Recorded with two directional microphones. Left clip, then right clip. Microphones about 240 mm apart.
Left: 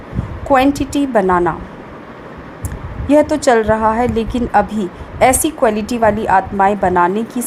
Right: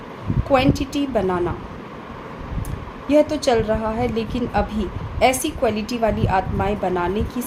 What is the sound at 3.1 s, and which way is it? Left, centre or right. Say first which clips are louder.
A woman's voice: left 6 dB; left.